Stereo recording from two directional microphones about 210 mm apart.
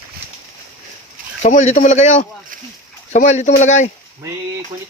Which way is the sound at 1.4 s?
35° left (ahead or behind).